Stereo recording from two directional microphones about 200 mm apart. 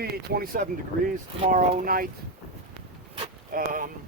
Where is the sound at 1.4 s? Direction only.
35° right (ahead or behind).